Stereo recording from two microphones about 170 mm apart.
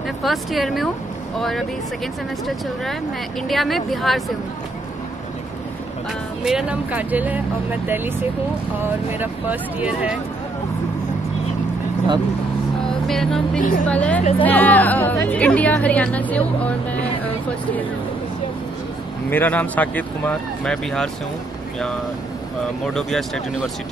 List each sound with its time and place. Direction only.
0.2 s a woman's voice: centre (ahead or behind)
6.4 s speech: 5° right (ahead or behind)
13.0 s music: centre (ahead or behind)
13.6 s a woman's voice: 50° left (ahead or behind)
13.8 s a woman's voice: 10° left (ahead or behind)
19.3 s a woman's voice: 10° left (ahead or behind)
22.9 s a woman's voice: centre (ahead or behind)